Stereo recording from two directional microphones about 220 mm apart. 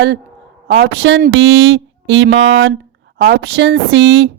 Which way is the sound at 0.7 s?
60° right (ahead or behind).